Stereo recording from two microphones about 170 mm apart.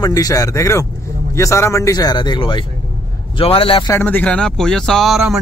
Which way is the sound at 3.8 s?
10° left (ahead or behind).